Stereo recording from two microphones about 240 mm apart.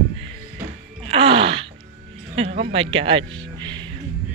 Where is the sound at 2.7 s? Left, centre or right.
Right.